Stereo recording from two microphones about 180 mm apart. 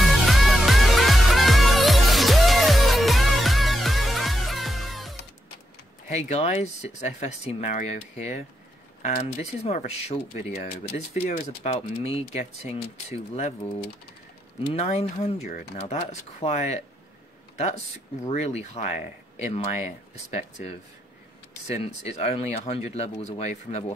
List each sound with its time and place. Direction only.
0.0 s music: centre (ahead or behind)
6.0 s speech: 40° left (ahead or behind)
14.7 s speech: 35° left (ahead or behind)
18.3 s speech: 40° left (ahead or behind)